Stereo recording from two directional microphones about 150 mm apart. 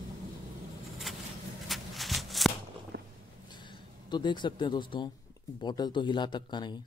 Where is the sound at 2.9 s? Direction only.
90° right.